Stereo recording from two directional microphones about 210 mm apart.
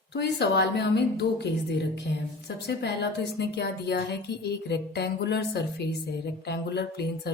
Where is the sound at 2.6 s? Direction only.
55° left (ahead or behind).